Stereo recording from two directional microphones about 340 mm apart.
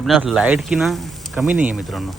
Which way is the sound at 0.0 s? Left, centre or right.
Centre.